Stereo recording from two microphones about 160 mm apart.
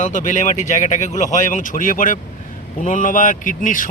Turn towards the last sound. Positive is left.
turn(degrees=55)  # may be behind; listen again after turning